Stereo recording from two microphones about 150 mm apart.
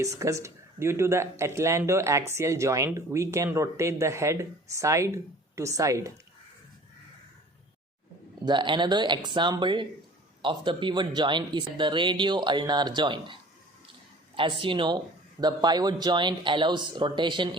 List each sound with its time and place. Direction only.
0.0 s speech: 20° right (ahead or behind)
8.4 s speech: 30° right (ahead or behind)